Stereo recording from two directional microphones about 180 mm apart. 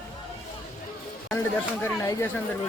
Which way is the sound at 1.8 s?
15° left (ahead or behind).